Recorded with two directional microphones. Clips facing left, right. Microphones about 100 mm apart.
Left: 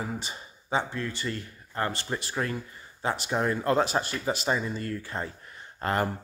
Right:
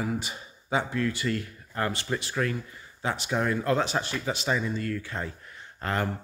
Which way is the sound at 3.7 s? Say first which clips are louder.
Left 2 dB; 5° left (ahead or behind).